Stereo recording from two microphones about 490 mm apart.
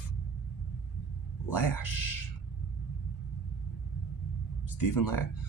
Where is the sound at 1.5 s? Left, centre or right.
Left.